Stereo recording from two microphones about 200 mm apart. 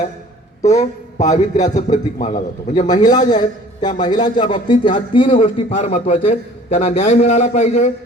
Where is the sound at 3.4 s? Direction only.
20° left (ahead or behind).